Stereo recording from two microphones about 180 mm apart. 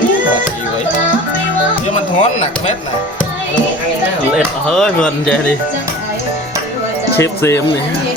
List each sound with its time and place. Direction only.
1.9 s speech: 40° left (ahead or behind)
4.4 s speech: centre (ahead or behind)
7.2 s speech: 15° left (ahead or behind)